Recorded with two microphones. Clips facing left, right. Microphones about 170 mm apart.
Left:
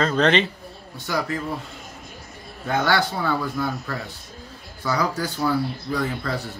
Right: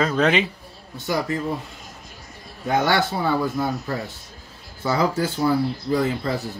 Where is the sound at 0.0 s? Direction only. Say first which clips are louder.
Even; 5° right (ahead or behind).